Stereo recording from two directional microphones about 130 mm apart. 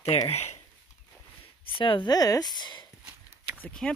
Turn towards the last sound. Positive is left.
turn(degrees=10)  # may be behind; listen again after turning